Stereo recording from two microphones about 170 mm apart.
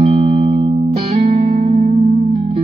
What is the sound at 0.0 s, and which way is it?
Music, 35° right (ahead or behind).